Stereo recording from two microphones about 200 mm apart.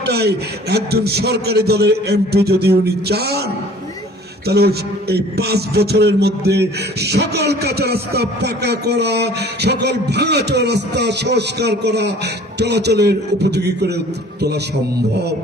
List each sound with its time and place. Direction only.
0.0 s a man's voice: 55° right (ahead or behind)
4.4 s a man's voice: 55° right (ahead or behind)